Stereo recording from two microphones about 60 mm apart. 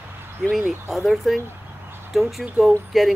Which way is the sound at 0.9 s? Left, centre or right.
Centre.